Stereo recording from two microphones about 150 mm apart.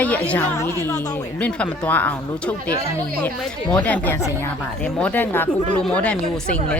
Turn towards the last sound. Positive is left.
turn(degrees=10)  # may be behind; listen again after turning